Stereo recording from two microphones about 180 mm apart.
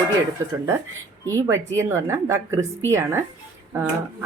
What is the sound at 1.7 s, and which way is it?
Speech, 15° right (ahead or behind).